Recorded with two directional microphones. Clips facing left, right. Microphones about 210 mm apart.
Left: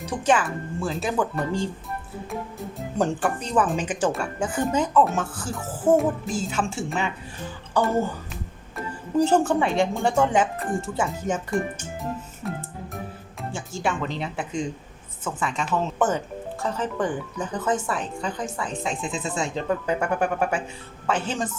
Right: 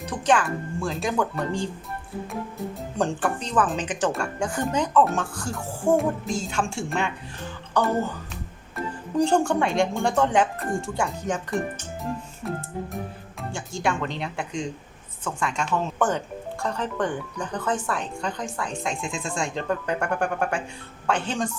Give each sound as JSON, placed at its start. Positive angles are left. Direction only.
{"t": 0.3, "sound": "speech", "side_deg": 5}
{"t": 12.4, "sound": "music", "side_deg": 0}
{"t": 13.5, "sound": "speech", "side_deg": 5}